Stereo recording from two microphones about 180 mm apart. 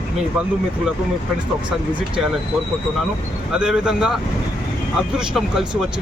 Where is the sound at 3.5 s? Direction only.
5° right (ahead or behind).